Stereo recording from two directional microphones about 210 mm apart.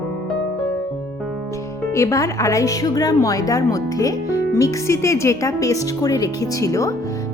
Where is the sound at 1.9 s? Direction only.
15° left (ahead or behind).